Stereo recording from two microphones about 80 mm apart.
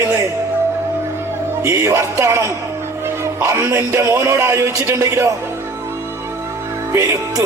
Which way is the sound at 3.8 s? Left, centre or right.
Right.